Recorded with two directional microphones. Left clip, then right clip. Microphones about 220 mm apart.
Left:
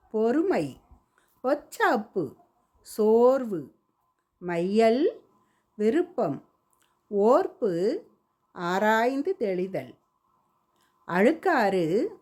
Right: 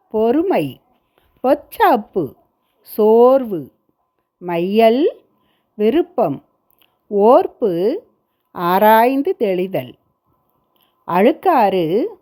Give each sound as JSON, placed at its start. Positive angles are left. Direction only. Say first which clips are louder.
{"t": 0.1, "sound": "a woman's voice", "louder": "right 9 dB", "side_deg": -20}